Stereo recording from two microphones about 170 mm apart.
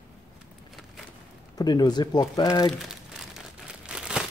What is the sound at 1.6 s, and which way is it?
Speech, 25° left (ahead or behind).